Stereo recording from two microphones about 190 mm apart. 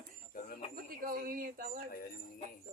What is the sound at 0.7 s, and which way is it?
Speech, 50° right (ahead or behind).